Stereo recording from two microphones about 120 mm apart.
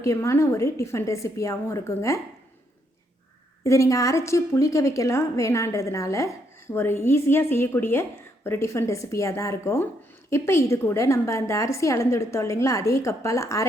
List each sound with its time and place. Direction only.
0.0 s a woman's voice: 25° left (ahead or behind)
3.6 s a woman's voice: 25° left (ahead or behind)